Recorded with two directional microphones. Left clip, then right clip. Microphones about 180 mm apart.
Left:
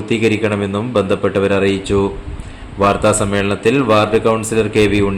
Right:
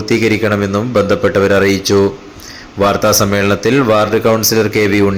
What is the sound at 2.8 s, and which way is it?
Speech, 15° right (ahead or behind).